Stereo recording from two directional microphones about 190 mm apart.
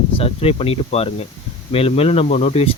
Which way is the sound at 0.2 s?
30° left (ahead or behind).